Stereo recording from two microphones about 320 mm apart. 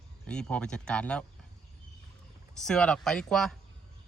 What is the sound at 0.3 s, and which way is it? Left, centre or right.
Speech, centre.